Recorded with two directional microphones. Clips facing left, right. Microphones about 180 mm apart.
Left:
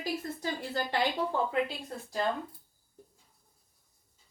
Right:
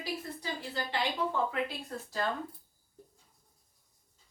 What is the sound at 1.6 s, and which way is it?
Speech, 15° left (ahead or behind).